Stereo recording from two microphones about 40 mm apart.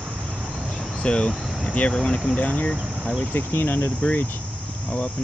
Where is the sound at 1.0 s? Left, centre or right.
Left.